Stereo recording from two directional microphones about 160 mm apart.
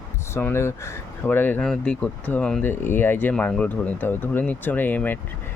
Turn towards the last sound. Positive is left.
turn(degrees=10)  # may be behind; listen again after turning